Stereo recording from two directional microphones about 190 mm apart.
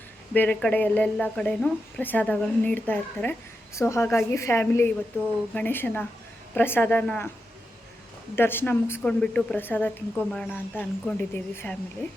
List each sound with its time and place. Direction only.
0.3 s speech: 5° left (ahead or behind)
8.4 s speech: 10° left (ahead or behind)